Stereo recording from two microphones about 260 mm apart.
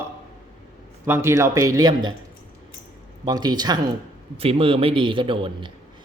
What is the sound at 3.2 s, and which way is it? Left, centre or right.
A man's voice, centre.